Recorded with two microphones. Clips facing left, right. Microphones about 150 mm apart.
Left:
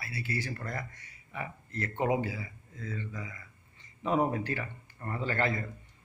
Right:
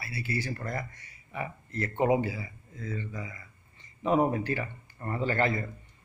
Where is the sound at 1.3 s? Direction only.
15° right (ahead or behind).